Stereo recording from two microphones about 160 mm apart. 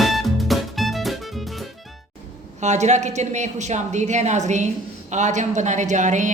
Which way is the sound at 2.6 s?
45° right (ahead or behind).